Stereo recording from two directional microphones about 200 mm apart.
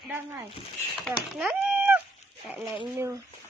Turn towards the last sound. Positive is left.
turn(degrees=-15)  # may be behind; listen again after turning